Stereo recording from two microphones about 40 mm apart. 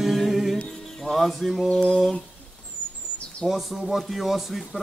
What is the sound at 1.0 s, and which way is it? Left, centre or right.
Music, centre.